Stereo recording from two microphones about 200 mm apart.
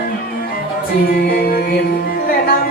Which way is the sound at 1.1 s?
50° left (ahead or behind).